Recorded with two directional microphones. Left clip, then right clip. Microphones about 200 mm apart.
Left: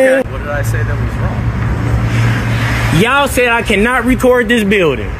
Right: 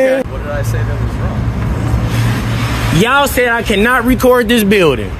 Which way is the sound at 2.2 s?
65° right (ahead or behind).